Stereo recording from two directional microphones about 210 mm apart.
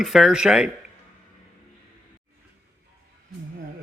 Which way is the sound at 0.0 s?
Centre (ahead or behind).